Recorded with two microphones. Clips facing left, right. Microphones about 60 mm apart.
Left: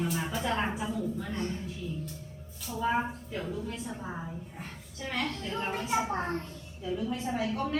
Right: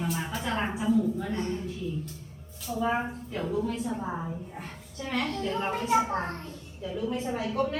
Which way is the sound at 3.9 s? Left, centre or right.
Centre.